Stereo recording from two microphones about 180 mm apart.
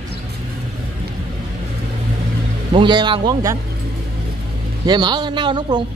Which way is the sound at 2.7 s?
25° right (ahead or behind).